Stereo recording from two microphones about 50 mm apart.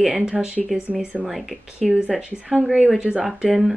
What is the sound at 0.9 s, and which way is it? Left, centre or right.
Speech, right.